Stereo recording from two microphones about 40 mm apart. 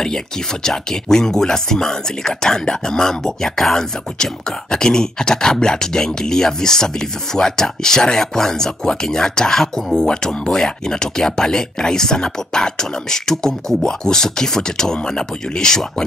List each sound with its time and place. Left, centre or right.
0.7 s speech: centre